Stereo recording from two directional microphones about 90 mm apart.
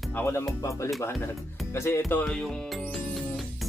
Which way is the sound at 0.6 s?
35° left (ahead or behind).